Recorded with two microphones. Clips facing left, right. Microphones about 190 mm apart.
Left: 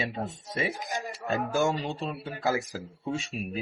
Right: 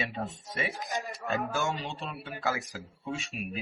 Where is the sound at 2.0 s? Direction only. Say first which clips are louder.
Left 5 dB; 40° left (ahead or behind).